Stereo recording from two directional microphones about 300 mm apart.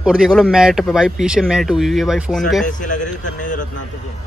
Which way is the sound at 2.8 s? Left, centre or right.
Left.